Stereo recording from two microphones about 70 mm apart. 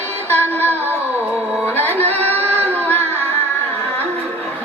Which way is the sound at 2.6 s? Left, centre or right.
Left.